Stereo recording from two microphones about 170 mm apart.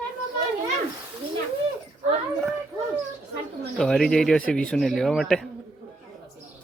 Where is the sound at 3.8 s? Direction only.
5° left (ahead or behind).